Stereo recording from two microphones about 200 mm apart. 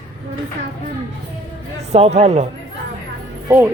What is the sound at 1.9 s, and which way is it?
Speech, 35° right (ahead or behind).